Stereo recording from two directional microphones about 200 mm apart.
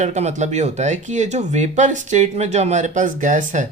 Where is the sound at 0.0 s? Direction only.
35° right (ahead or behind).